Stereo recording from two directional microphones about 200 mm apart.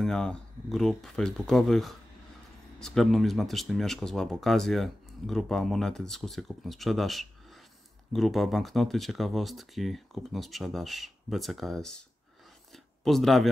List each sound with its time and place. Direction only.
0.0 s speech: 5° left (ahead or behind)